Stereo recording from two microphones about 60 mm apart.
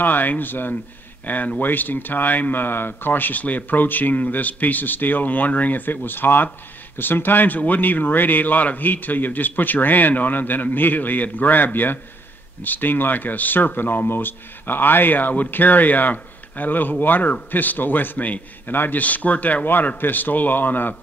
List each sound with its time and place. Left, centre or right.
0.0 s speech: left